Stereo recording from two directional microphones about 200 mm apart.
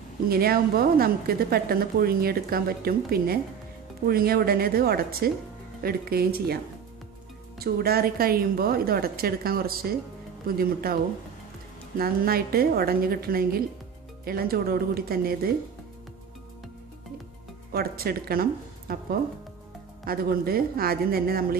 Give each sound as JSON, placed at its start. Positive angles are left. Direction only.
{"t": 0.3, "sound": "a woman's voice", "side_deg": -50}
{"t": 12.0, "sound": "a woman's voice", "side_deg": -50}
{"t": 17.7, "sound": "a woman's voice", "side_deg": -50}